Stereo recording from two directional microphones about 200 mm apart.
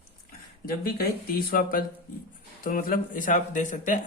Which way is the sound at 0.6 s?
45° left (ahead or behind).